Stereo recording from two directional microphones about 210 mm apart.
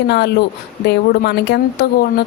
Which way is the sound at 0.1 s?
50° left (ahead or behind).